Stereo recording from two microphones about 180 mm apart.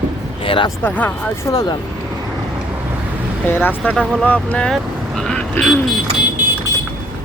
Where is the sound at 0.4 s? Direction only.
30° left (ahead or behind).